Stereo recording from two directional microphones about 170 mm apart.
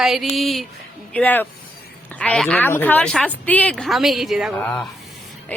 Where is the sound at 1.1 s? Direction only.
10° left (ahead or behind).